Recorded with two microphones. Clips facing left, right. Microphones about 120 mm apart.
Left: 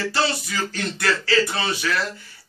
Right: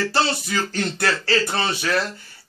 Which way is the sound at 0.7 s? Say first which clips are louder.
Left 1 dB; 50° right (ahead or behind).